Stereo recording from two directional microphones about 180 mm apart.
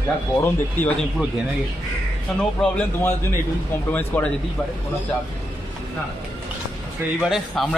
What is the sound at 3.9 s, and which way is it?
Speech, 10° left (ahead or behind).